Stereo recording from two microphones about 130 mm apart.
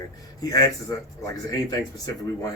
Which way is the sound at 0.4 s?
30° left (ahead or behind).